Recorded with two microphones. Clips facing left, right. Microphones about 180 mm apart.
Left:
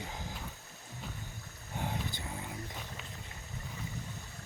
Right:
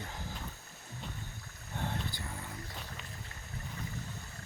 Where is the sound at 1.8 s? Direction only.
10° left (ahead or behind).